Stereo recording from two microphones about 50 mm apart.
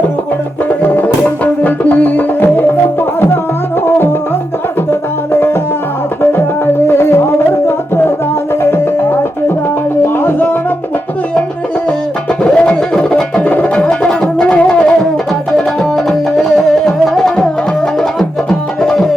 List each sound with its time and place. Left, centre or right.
0.8 s music: left
3.8 s music: left
6.8 s music: left
8.6 s music: left
12.4 s music: centre
13.4 s music: left
15.5 s music: centre
18.8 s music: centre